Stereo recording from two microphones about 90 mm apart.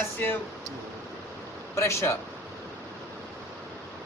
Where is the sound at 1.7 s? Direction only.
30° left (ahead or behind).